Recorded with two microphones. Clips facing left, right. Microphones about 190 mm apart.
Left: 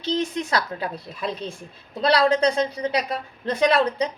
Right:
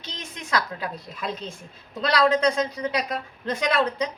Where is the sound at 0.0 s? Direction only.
30° left (ahead or behind).